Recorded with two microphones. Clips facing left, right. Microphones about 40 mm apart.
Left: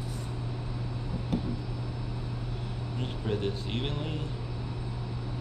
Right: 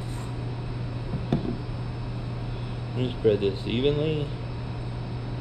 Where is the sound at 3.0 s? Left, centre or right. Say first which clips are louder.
Right 10 dB; right.